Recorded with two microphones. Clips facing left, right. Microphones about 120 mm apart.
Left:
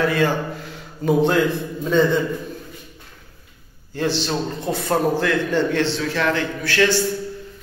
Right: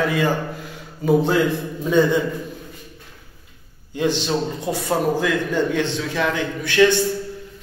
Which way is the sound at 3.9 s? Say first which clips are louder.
Right 2 dB; 15° right (ahead or behind).